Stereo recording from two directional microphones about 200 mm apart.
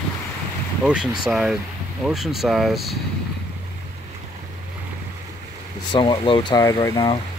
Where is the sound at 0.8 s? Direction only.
5° right (ahead or behind).